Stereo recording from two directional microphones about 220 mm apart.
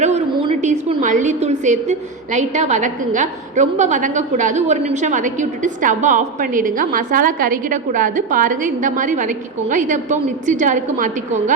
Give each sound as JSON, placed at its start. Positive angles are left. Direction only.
{"t": 0.0, "sound": "a woman's voice", "side_deg": -25}